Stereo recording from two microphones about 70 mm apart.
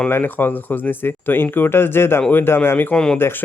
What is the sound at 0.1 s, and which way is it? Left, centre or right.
Speech, left.